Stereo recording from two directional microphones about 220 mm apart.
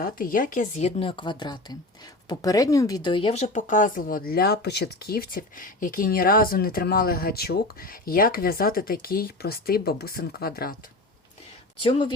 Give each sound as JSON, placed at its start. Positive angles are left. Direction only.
{"t": 0.0, "sound": "speech", "side_deg": 40}
{"t": 11.8, "sound": "speech", "side_deg": 25}